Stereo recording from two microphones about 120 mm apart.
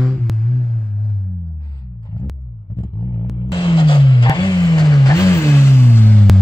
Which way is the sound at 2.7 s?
40° left (ahead or behind).